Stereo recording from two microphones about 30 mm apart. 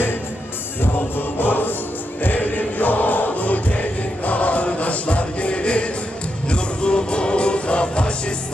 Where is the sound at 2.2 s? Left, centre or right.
Left.